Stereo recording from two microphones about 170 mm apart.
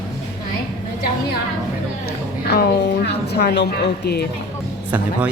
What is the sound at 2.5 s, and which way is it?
A woman's voice, 70° left (ahead or behind).